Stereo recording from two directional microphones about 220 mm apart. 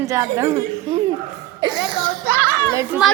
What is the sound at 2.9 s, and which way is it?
Speech, 10° right (ahead or behind).